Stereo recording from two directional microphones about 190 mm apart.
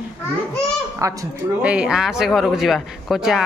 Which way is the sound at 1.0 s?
15° right (ahead or behind).